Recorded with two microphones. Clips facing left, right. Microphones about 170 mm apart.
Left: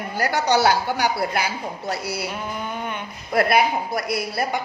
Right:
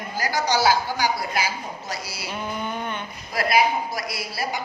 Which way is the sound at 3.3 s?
55° left (ahead or behind).